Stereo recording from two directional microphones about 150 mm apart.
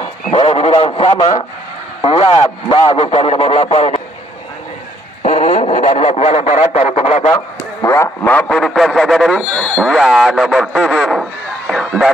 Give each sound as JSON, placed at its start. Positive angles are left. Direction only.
{"t": 0.3, "sound": "a man's voice", "side_deg": 40}
{"t": 5.2, "sound": "radio", "side_deg": 45}
{"t": 7.2, "sound": "a man's voice", "side_deg": 20}